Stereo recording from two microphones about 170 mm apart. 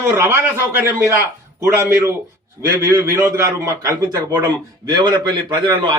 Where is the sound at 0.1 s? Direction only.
15° right (ahead or behind).